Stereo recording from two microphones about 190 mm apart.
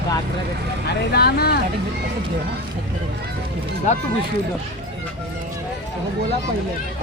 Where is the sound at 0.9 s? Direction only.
55° left (ahead or behind).